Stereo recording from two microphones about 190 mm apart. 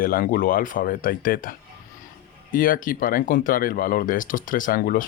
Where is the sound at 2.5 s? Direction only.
45° left (ahead or behind).